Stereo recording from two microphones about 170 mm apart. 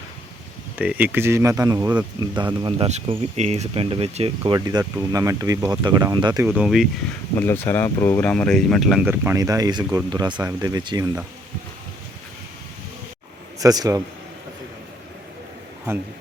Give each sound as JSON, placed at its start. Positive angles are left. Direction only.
{"t": 0.8, "sound": "speech", "side_deg": -10}
{"t": 4.5, "sound": "speech", "side_deg": -25}
{"t": 6.5, "sound": "speech", "side_deg": -5}
{"t": 7.3, "sound": "speech", "side_deg": 15}
{"t": 13.6, "sound": "speech", "side_deg": -20}